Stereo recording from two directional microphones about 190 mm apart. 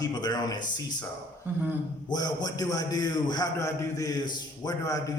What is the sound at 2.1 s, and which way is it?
A man's voice, 20° left (ahead or behind).